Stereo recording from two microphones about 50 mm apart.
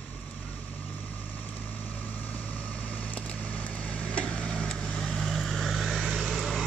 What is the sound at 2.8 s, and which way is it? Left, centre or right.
Vehicle, left.